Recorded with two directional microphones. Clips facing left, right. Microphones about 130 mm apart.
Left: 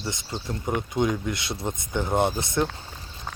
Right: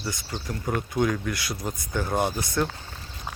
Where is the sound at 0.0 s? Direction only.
20° left (ahead or behind).